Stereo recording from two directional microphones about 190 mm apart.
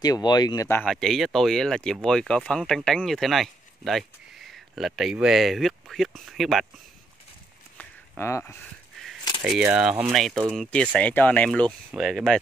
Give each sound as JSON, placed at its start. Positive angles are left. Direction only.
{"t": 0.0, "sound": "speech", "side_deg": 20}
{"t": 7.7, "sound": "a sound", "side_deg": 10}
{"t": 9.4, "sound": "speech", "side_deg": -5}